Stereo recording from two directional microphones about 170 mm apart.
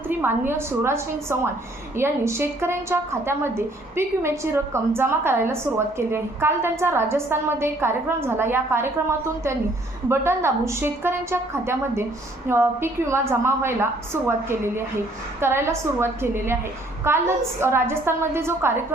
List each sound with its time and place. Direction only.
0.1 s a woman's voice: 10° right (ahead or behind)